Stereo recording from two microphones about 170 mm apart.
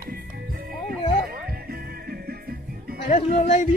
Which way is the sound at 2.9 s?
40° left (ahead or behind).